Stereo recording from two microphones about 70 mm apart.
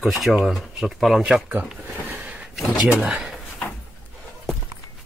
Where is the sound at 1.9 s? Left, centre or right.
Right.